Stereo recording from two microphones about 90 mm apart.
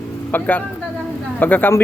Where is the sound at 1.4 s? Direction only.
20° left (ahead or behind).